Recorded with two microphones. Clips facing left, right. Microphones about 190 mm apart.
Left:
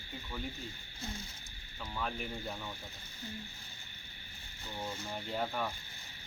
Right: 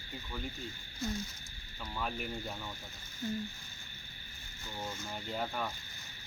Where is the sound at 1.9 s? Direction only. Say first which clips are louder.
Right 1 dB; 5° right (ahead or behind).